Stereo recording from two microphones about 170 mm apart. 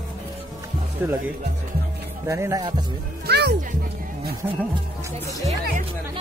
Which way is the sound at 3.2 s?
75° right (ahead or behind).